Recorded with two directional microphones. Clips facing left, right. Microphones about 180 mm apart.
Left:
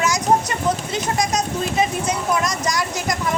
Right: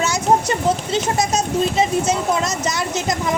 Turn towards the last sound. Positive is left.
turn(degrees=-25)  # may be behind; listen again after turning